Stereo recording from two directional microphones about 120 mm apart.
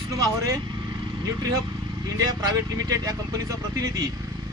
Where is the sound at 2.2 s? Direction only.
30° right (ahead or behind).